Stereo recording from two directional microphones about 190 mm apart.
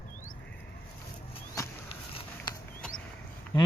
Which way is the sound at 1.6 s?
15° left (ahead or behind).